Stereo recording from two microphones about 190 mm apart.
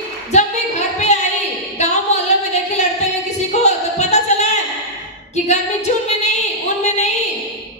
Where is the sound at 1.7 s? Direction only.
35° left (ahead or behind).